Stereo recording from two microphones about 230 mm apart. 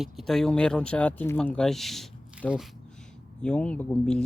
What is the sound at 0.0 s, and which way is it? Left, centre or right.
Speech, centre.